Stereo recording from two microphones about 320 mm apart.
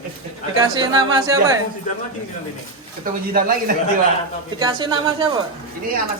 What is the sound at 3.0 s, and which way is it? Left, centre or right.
Speech, right.